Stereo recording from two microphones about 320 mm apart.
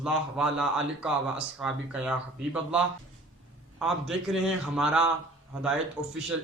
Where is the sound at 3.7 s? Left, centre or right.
Centre.